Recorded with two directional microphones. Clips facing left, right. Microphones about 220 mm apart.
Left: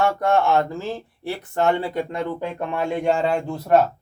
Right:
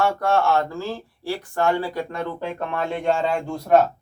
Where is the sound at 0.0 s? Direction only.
15° left (ahead or behind).